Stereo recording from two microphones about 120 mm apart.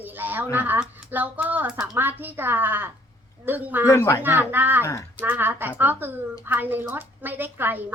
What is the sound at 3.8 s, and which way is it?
Speech, 25° left (ahead or behind).